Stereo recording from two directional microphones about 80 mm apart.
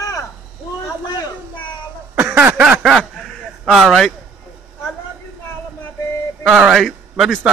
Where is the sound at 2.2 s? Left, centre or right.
Right.